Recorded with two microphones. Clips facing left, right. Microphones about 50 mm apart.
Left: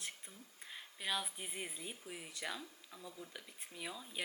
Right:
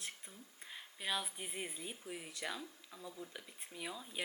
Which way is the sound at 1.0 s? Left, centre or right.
Centre.